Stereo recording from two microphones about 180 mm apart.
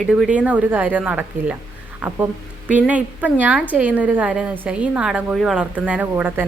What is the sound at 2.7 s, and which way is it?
A woman's voice, 10° right (ahead or behind).